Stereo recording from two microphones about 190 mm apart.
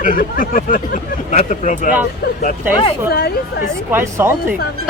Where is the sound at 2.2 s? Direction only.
55° left (ahead or behind).